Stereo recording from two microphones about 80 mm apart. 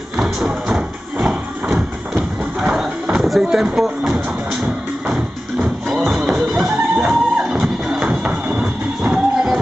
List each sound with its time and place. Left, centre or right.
0.2 s music: centre
2.6 s a sound: centre
5.0 s music: centre
8.1 s music: centre